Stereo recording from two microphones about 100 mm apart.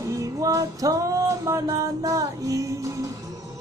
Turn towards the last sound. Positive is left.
turn(degrees=-35)  # may be behind; listen again after turning